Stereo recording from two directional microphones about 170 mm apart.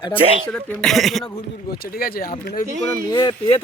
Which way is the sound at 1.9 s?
60° left (ahead or behind).